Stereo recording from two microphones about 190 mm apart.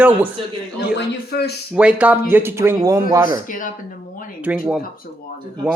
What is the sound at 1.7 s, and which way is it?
Speech, 5° right (ahead or behind).